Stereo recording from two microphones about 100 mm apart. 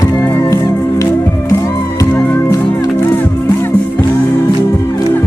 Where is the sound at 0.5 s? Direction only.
35° left (ahead or behind).